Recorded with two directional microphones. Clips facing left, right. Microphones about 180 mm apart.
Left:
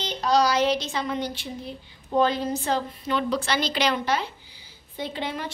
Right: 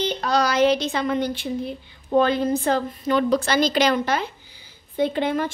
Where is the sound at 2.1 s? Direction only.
55° right (ahead or behind).